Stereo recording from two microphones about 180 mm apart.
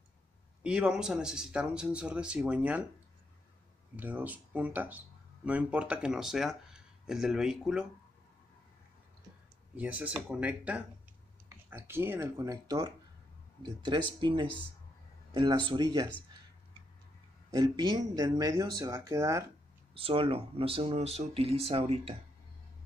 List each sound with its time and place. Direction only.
0.7 s speech: 5° right (ahead or behind)
3.9 s speech: 10° right (ahead or behind)
9.8 s speech: 10° right (ahead or behind)
17.5 s speech: 25° right (ahead or behind)
19.9 s speech: 30° right (ahead or behind)